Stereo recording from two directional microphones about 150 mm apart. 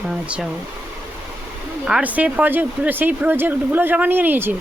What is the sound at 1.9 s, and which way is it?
Speech, 5° right (ahead or behind).